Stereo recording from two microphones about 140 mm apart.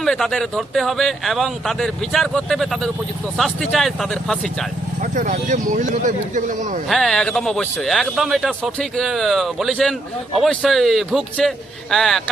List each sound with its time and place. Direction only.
0.0 s speech: centre (ahead or behind)
5.1 s speech: 65° right (ahead or behind)
6.8 s speech: centre (ahead or behind)